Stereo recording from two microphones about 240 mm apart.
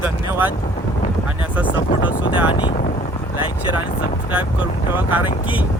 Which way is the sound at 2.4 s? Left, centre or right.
Left.